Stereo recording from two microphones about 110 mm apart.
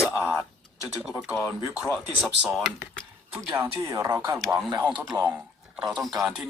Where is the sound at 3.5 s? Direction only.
25° right (ahead or behind).